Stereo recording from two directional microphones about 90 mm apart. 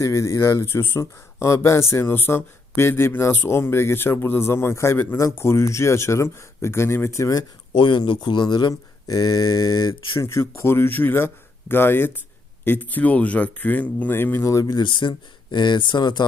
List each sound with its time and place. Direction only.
0.0 s speech: 35° left (ahead or behind)
7.8 s a man's voice: 65° left (ahead or behind); by 9.9 s 45° left (ahead or behind)
10.2 s a man's voice: 30° left (ahead or behind); by 16.2 s 55° left (ahead or behind)